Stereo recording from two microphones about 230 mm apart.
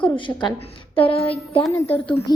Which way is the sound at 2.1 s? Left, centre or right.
Left.